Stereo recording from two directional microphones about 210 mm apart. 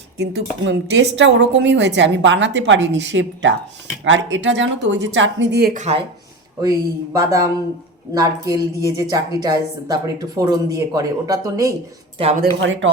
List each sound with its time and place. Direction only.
0.2 s speech: 60° right (ahead or behind)
6.6 s a woman's voice: 15° right (ahead or behind)
12.1 s speech: 30° right (ahead or behind)
12.5 s speech: 65° right (ahead or behind)